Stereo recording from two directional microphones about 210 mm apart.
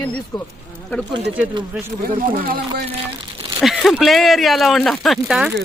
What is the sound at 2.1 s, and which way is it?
Speech, 40° right (ahead or behind).